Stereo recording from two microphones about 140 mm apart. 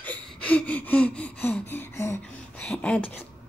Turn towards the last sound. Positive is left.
turn(degrees=10)  # may be behind; listen again after turning